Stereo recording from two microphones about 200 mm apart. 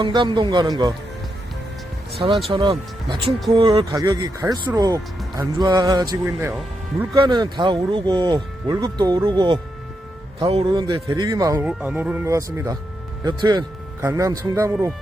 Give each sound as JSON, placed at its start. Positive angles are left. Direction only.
{"t": 0.0, "sound": "speech", "side_deg": -25}
{"t": 2.5, "sound": "speech", "side_deg": -25}
{"t": 11.7, "sound": "speech", "side_deg": -5}